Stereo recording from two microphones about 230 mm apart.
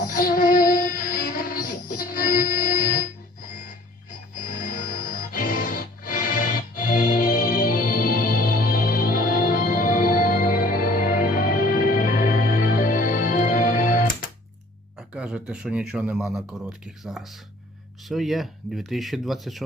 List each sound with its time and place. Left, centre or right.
0.1 s music: left
4.6 s music: left
14.9 s speech: centre